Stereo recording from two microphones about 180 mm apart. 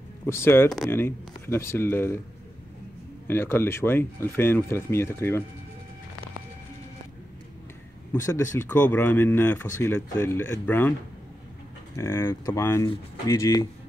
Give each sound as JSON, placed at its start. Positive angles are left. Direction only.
{"t": 0.3, "sound": "speech", "side_deg": 15}
{"t": 3.3, "sound": "speech", "side_deg": 10}
{"t": 8.1, "sound": "speech", "side_deg": 15}
{"t": 12.0, "sound": "speech", "side_deg": 15}